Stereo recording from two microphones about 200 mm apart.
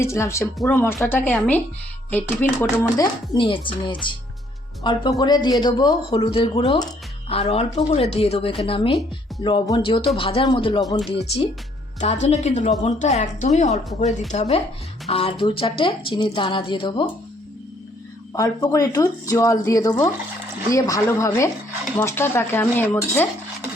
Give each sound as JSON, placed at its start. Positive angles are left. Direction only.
{"t": 0.0, "sound": "speech", "side_deg": 15}
{"t": 3.3, "sound": "a man's voice", "side_deg": 25}
{"t": 11.9, "sound": "a woman's voice", "side_deg": 35}
{"t": 18.3, "sound": "speech", "side_deg": 20}